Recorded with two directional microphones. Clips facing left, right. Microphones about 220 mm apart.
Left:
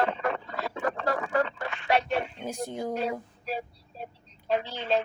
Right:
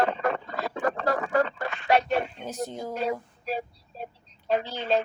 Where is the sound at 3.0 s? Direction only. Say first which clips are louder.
Right 2 dB; 40° right (ahead or behind).